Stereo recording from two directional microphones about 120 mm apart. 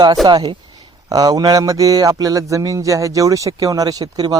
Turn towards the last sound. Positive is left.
turn(degrees=-35)  # may be behind; listen again after turning